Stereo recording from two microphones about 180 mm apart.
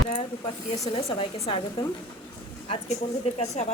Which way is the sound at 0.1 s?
35° left (ahead or behind).